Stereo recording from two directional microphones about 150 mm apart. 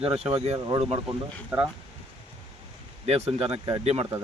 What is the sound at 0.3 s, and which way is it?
Speech, 40° right (ahead or behind).